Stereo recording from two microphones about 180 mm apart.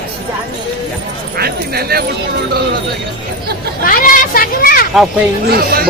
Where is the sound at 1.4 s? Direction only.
60° right (ahead or behind).